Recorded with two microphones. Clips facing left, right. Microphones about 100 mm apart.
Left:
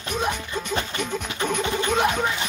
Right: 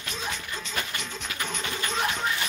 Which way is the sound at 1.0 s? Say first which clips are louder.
Left 8 dB; 55° left (ahead or behind).